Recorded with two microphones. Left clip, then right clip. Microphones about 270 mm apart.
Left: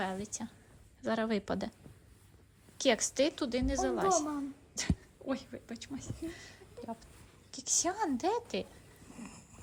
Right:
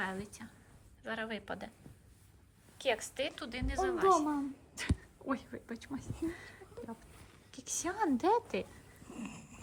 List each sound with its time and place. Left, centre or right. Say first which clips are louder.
0.0 s a woman's voice: left 2 dB; centre
2.7 s a woman's voice: left 5 dB; left; by 8.6 s centre
9.1 s a sound: right 4 dB; right